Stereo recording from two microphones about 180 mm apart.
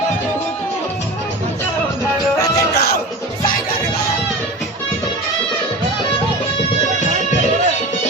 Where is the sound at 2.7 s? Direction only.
60° left (ahead or behind).